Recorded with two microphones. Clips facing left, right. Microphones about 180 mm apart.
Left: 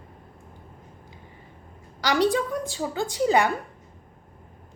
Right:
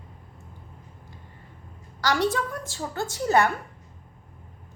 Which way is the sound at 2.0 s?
15° left (ahead or behind).